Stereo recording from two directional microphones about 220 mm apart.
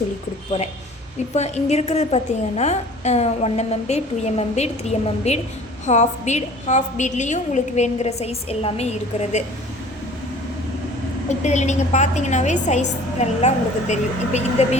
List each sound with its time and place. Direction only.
1.4 s a woman's voice: 30° left (ahead or behind)
11.3 s a woman's voice: 30° left (ahead or behind)